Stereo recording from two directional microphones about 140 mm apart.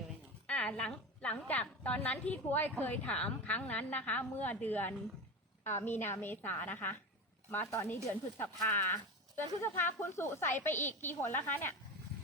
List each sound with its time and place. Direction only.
0.4 s a woman's voice: 10° left (ahead or behind)